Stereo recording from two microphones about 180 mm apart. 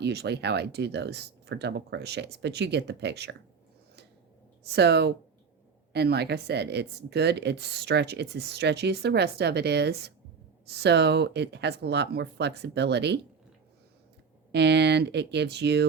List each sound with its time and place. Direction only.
0.0 s speech: 65° right (ahead or behind)
4.7 s speech: 65° right (ahead or behind)
14.5 s speech: 70° right (ahead or behind)